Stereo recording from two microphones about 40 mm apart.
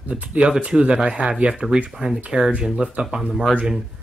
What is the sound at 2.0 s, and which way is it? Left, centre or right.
Speech, right.